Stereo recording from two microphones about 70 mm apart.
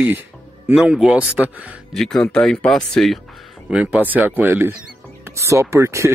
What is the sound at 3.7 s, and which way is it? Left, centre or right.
Speech, centre.